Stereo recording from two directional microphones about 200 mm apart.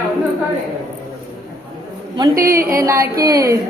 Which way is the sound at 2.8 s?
15° right (ahead or behind).